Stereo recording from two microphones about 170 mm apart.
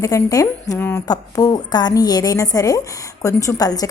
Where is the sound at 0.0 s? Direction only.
20° left (ahead or behind).